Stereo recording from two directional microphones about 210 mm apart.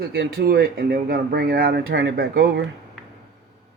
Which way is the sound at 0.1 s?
45° right (ahead or behind).